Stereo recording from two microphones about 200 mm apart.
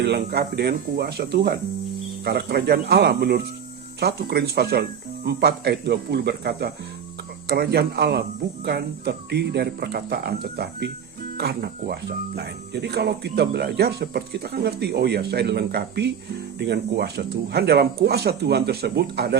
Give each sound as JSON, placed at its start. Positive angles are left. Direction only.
{"t": 0.0, "sound": "speech", "side_deg": -55}